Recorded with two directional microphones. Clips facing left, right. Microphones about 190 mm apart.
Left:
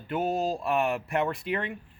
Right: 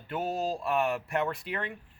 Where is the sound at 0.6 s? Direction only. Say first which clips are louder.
Left 2 dB; 10° left (ahead or behind).